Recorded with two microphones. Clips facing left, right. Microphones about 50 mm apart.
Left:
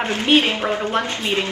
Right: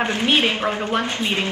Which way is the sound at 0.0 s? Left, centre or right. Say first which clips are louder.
Left 2 dB; right.